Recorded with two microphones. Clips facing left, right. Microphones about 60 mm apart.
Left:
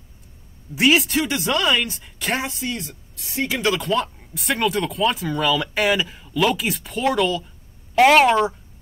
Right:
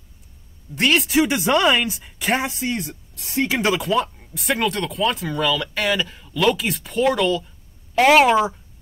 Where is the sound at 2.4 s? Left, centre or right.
Right.